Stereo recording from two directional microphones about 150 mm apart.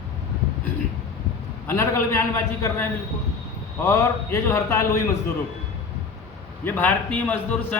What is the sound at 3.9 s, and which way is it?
A man's voice, 20° left (ahead or behind).